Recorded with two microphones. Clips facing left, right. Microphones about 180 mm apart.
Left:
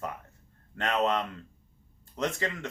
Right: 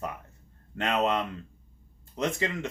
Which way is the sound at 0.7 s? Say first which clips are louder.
Right 1 dB; 15° right (ahead or behind).